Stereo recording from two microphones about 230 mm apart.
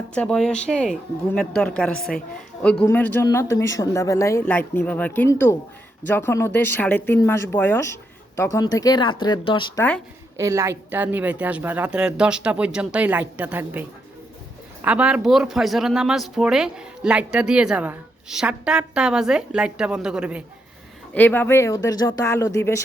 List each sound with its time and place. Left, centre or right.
0.1 s speech: centre; by 9.8 s left
10.3 s a woman's voice: centre
21.1 s speech: centre